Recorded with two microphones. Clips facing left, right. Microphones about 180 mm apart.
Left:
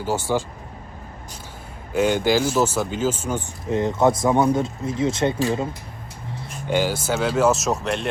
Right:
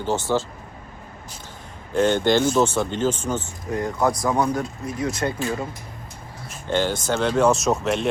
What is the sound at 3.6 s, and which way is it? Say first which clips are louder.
Speech: left 4 dB; 25° left (ahead or behind).